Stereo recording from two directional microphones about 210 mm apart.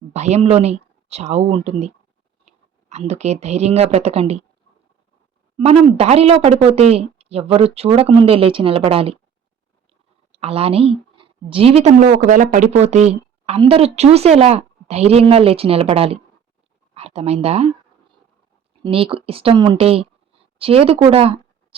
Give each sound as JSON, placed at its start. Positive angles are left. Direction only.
{"t": 0.1, "sound": "speech", "side_deg": -30}
{"t": 5.5, "sound": "speech", "side_deg": -30}
{"t": 10.3, "sound": "speech", "side_deg": -30}
{"t": 18.8, "sound": "speech", "side_deg": -25}